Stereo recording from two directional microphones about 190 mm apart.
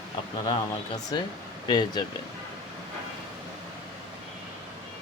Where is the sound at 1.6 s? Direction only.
25° left (ahead or behind).